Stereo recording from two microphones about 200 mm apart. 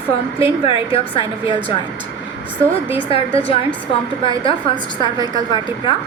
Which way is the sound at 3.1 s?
30° left (ahead or behind).